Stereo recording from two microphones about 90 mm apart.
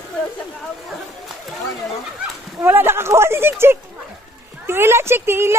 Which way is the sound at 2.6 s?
25° right (ahead or behind).